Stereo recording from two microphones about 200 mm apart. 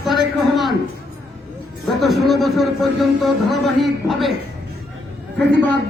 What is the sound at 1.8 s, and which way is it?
A man's voice, centre (ahead or behind).